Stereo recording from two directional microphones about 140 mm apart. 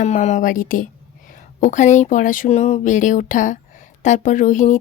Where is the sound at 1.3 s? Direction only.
65° left (ahead or behind).